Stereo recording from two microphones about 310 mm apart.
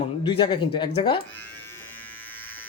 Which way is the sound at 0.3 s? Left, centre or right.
Centre.